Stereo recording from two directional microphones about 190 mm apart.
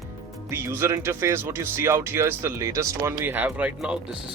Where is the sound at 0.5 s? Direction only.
10° right (ahead or behind).